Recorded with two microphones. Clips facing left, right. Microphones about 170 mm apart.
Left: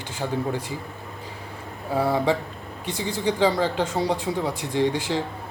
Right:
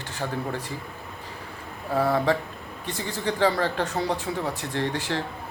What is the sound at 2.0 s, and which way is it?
Speech, 15° left (ahead or behind).